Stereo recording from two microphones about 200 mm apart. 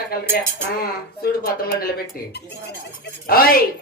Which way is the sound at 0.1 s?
45° left (ahead or behind).